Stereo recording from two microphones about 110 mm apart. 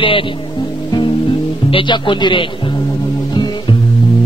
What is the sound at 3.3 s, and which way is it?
Music, 40° left (ahead or behind).